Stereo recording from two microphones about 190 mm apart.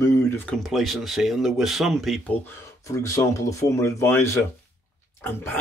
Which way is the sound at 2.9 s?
15° left (ahead or behind).